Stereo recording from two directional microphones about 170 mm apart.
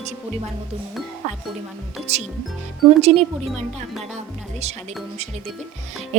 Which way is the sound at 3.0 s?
40° right (ahead or behind).